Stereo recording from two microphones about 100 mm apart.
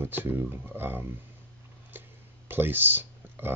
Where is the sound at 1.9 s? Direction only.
20° right (ahead or behind).